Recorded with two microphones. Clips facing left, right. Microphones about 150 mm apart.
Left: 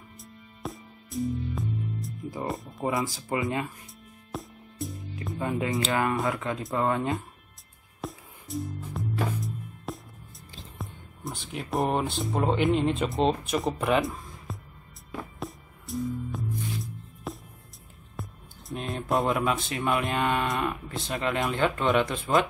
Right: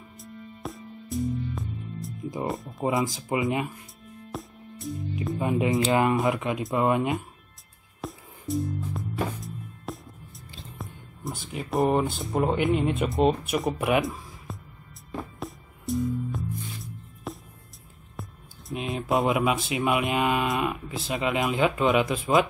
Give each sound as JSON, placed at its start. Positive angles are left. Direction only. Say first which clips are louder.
{"t": 0.6, "sound": "music", "louder": "left 1 dB", "side_deg": 0}
{"t": 2.4, "sound": "speech", "louder": "right 2 dB", "side_deg": 0}
{"t": 2.8, "sound": "speech", "louder": "right 3 dB", "side_deg": -20}
{"t": 4.3, "sound": "music", "louder": "even", "side_deg": 0}
{"t": 5.4, "sound": "speech", "louder": "right 4 dB", "side_deg": -20}
{"t": 8.0, "sound": "music", "louder": "right 1 dB", "side_deg": 0}
{"t": 11.5, "sound": "speech", "louder": "right 3 dB", "side_deg": 0}
{"t": 15.0, "sound": "music", "louder": "right 2 dB", "side_deg": 0}
{"t": 18.7, "sound": "a sound", "louder": "right 2 dB", "side_deg": -5}
{"t": 19.2, "sound": "speech", "louder": "right 2 dB", "side_deg": -15}